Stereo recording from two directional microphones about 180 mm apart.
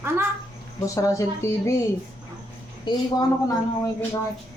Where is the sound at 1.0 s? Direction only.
15° left (ahead or behind).